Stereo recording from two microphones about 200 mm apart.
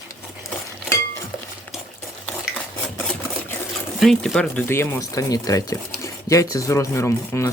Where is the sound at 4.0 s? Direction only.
Centre (ahead or behind).